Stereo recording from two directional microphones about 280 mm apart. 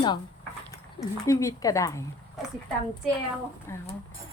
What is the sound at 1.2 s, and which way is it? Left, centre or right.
Speech, centre.